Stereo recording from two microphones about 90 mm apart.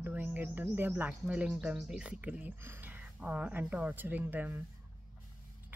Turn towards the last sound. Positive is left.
turn(degrees=-20)  # may be behind; listen again after turning